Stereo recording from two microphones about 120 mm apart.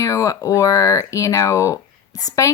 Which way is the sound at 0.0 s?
25° left (ahead or behind).